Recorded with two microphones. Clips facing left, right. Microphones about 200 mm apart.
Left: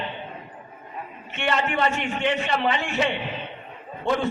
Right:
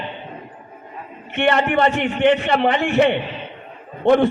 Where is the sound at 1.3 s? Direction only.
60° right (ahead or behind).